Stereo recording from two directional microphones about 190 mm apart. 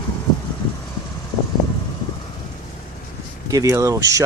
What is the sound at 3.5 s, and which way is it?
Speech, 15° right (ahead or behind).